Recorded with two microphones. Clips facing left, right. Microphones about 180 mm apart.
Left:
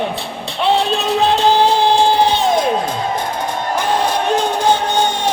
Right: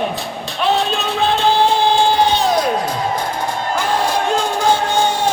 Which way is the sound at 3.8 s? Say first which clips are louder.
Left 1 dB; 20° left (ahead or behind).